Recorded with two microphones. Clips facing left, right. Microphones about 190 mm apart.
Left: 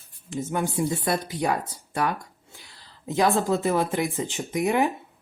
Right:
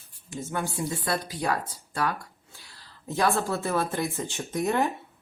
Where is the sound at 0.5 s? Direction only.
20° left (ahead or behind).